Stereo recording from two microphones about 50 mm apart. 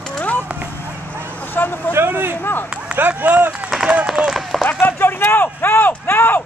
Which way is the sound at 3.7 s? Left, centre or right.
Centre.